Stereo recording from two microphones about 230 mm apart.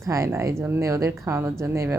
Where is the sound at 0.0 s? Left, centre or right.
Centre.